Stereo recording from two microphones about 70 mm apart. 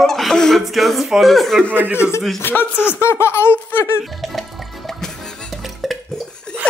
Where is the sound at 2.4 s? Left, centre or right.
Left.